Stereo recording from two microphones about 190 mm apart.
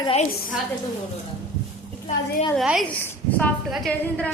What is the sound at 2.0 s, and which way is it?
Speech, 30° left (ahead or behind).